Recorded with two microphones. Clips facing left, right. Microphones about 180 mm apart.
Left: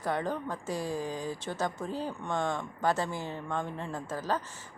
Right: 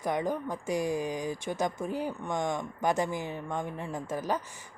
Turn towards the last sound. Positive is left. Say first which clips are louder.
# right 1 dB
turn(degrees=-15)  # may be behind; listen again after turning